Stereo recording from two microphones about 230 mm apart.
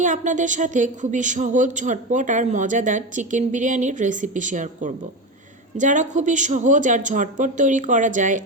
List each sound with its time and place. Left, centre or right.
0.0 s speech: right